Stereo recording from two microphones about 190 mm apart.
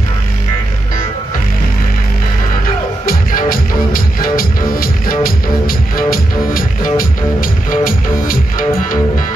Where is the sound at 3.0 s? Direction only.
50° left (ahead or behind).